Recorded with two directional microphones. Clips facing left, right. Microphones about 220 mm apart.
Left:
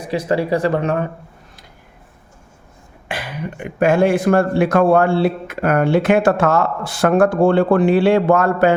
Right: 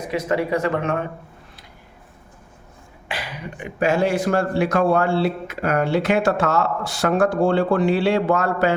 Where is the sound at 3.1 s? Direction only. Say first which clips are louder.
Left 5 dB; 55° left (ahead or behind).